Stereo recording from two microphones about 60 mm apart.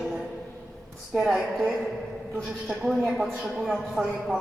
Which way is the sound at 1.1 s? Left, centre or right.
Centre.